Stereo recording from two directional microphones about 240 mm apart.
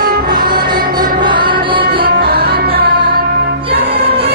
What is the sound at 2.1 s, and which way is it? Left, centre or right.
Music, right.